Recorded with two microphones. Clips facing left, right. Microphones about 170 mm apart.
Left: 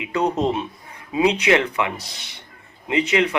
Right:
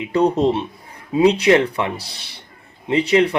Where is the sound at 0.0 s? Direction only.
35° right (ahead or behind).